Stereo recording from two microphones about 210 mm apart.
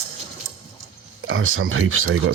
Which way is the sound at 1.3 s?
70° right (ahead or behind).